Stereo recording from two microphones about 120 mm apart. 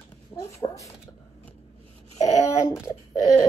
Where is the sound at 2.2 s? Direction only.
25° left (ahead or behind).